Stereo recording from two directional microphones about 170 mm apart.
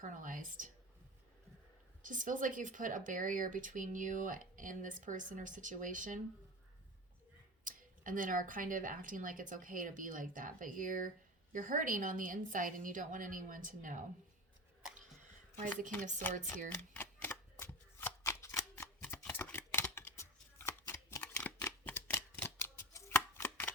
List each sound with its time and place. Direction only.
0.0 s speech: 50° right (ahead or behind)
2.0 s speech: 50° right (ahead or behind)
7.6 s speech: 50° right (ahead or behind)
15.5 s speech: 45° right (ahead or behind)
16.9 s shuffling cards: 10° left (ahead or behind)
19.2 s chopping: 10° left (ahead or behind)